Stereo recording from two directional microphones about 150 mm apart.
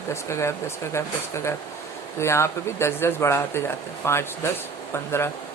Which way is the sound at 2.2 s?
20° left (ahead or behind).